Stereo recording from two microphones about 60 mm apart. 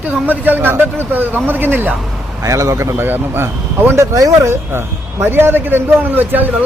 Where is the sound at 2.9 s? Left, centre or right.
Right.